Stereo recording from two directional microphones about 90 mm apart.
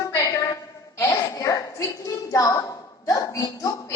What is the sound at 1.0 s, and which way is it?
A woman's voice, 40° left (ahead or behind).